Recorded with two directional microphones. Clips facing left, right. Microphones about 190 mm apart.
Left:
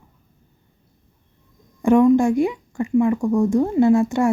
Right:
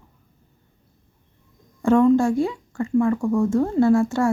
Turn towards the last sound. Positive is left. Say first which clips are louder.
# left 2 dB
turn(degrees=20)  # may be behind; listen again after turning